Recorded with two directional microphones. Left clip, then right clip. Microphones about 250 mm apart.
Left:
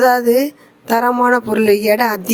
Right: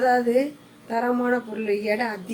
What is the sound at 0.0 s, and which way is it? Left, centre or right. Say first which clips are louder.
Speech: left 8 dB; left.